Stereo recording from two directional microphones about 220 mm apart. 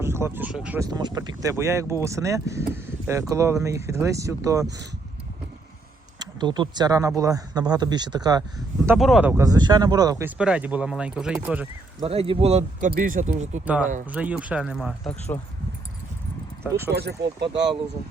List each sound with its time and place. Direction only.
0.0 s speech: 10° right (ahead or behind)
0.9 s speech: 15° right (ahead or behind)
6.1 s speech: 20° right (ahead or behind)
9.0 s speech: centre (ahead or behind)
12.0 s speech: 25° right (ahead or behind)
14.1 s speech: 5° right (ahead or behind)
16.6 s speech: 10° right (ahead or behind)
16.9 s speech: 50° right (ahead or behind)